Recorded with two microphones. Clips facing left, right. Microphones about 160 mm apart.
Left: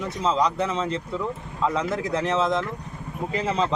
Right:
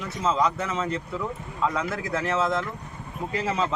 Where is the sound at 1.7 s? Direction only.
20° left (ahead or behind).